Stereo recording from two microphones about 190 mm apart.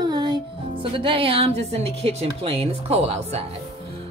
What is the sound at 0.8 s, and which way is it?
A woman's voice, 25° right (ahead or behind).